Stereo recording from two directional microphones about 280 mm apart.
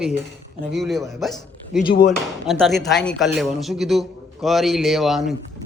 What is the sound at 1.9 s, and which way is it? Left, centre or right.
Speech, left.